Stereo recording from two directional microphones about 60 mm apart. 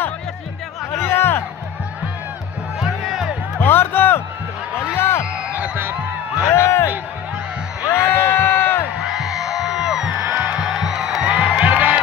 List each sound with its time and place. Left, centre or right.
0.9 s music: left
2.8 s music: centre
3.5 s music: left
4.9 s a sound: left
6.5 s a sound: left
7.9 s music: left
9.0 s music: centre
10.1 s music: right
10.6 s music: centre
11.4 s music: right